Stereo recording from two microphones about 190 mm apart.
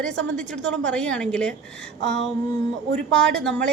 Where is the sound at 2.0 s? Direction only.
65° right (ahead or behind).